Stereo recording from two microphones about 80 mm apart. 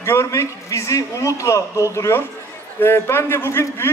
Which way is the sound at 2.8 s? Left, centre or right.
Left.